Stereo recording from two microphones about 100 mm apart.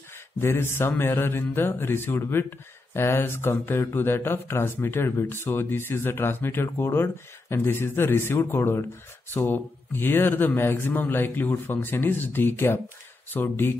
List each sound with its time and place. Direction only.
0.4 s speech: 25° left (ahead or behind)